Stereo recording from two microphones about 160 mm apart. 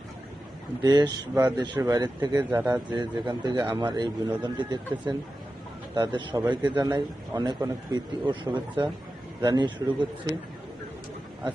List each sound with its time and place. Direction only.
0.8 s a man's voice: 25° right (ahead or behind)